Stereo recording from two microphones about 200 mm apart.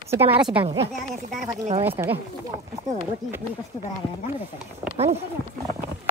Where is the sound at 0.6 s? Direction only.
20° right (ahead or behind).